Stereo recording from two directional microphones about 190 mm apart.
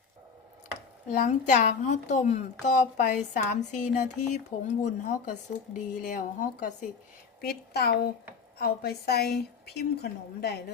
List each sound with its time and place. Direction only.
1.0 s a woman's voice: 40° left (ahead or behind)
7.4 s a woman's voice: 55° left (ahead or behind)